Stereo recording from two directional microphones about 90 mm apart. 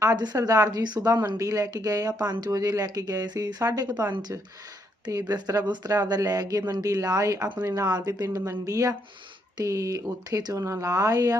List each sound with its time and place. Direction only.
0.0 s a woman's voice: 40° right (ahead or behind)